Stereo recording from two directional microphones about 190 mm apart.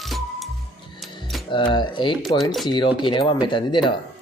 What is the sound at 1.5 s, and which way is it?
Speech, 25° left (ahead or behind).